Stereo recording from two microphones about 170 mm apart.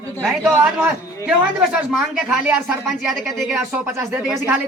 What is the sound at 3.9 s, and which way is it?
Speech, 15° right (ahead or behind).